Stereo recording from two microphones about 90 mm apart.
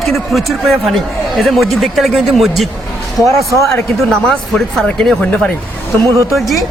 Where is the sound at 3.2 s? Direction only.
40° right (ahead or behind).